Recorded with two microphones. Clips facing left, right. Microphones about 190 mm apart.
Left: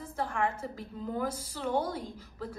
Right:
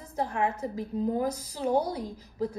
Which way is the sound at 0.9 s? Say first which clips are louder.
Right 6 dB; 40° right (ahead or behind).